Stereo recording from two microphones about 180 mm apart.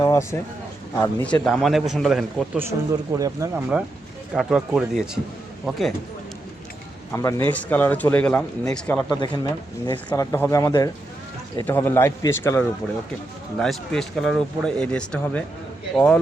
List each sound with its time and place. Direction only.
0.0 s a sound: 15° left (ahead or behind)
0.9 s speech: 10° left (ahead or behind)
2.6 s speech: 15° right (ahead or behind)
4.4 s speech: centre (ahead or behind)
7.1 s speech: 15° left (ahead or behind)
9.2 s speech: 25° left (ahead or behind); by 16.2 s 5° left (ahead or behind)